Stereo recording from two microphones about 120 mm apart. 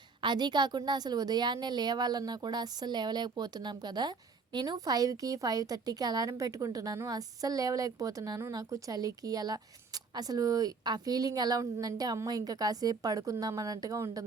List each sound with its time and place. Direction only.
0.2 s a woman's voice: 40° right (ahead or behind)